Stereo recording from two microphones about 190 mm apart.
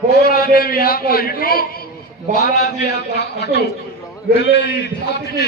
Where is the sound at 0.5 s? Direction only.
50° left (ahead or behind).